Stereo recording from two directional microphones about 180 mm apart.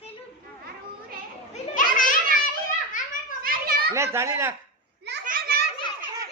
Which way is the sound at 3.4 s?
55° right (ahead or behind).